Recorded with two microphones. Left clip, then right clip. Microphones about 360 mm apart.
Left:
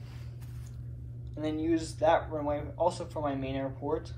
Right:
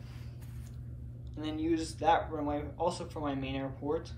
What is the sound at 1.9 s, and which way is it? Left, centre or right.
A man's voice, centre.